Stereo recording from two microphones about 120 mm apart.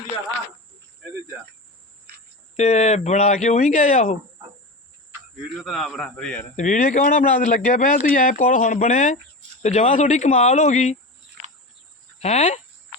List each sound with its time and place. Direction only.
2.6 s speech: 70° left (ahead or behind)
5.5 s a man's voice: centre (ahead or behind)
6.6 s a man's voice: 90° left
12.2 s speech: 75° left (ahead or behind)